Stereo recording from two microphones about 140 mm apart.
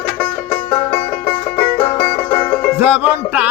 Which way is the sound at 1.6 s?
15° left (ahead or behind).